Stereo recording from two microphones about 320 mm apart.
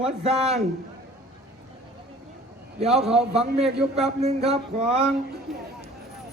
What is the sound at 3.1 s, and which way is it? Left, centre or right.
Speech, centre.